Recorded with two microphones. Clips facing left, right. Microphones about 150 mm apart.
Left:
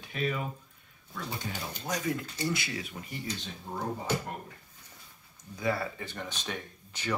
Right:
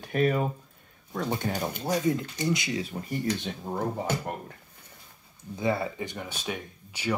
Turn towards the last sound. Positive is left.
turn(degrees=-10)  # may be behind; listen again after turning